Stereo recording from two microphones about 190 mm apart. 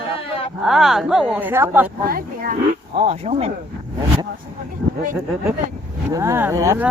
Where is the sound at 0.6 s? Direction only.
Centre (ahead or behind).